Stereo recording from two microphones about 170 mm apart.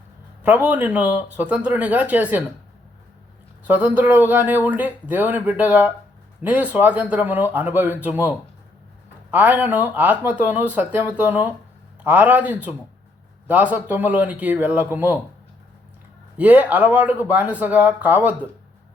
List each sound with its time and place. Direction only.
0.4 s speech: 10° right (ahead or behind)
3.7 s speech: 10° right (ahead or behind)
16.4 s speech: 10° right (ahead or behind)